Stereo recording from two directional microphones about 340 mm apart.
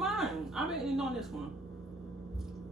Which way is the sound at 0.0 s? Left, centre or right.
Centre.